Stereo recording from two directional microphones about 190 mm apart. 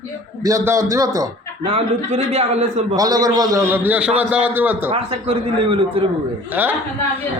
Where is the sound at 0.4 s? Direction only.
15° right (ahead or behind).